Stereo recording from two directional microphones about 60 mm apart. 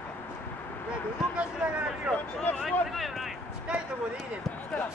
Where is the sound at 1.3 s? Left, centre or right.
Centre.